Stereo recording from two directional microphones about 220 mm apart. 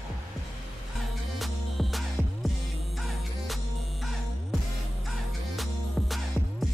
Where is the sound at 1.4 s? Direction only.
Centre (ahead or behind).